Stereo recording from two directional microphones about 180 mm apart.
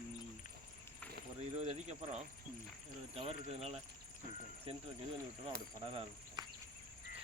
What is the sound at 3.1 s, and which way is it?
Speech, 35° right (ahead or behind).